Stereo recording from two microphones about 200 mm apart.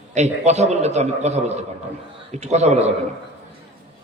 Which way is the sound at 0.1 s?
35° right (ahead or behind).